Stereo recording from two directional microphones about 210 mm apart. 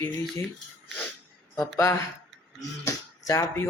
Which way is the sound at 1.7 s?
10° left (ahead or behind).